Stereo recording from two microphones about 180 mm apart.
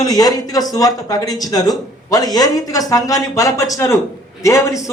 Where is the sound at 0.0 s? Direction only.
20° left (ahead or behind).